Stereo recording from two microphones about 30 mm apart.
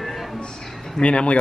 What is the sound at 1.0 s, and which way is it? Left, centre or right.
Speech, left.